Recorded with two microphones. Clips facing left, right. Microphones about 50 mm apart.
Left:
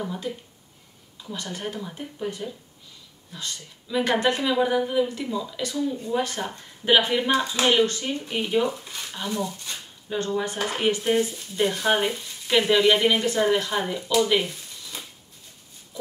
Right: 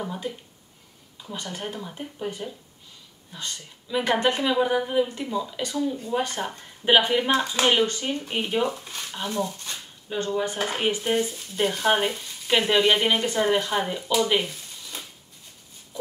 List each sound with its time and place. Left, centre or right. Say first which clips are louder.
0.0 s speech: left 1 dB; centre
3.3 s speech: even; right
4.4 s speech: even; centre
14.4 s a sound: left 1 dB; centre